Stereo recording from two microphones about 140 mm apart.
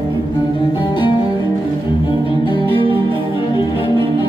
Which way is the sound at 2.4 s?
35° left (ahead or behind).